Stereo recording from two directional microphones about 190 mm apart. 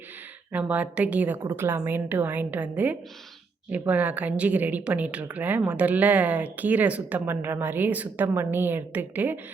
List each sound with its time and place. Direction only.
0.5 s speech: 5° right (ahead or behind)